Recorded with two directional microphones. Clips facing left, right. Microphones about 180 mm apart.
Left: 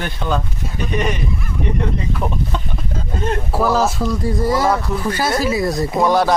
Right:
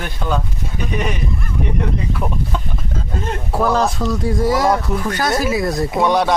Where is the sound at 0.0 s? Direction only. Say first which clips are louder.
Left 1 dB; 5° right (ahead or behind).